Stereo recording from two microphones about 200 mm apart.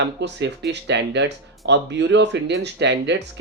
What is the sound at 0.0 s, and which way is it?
Speech, 60° right (ahead or behind).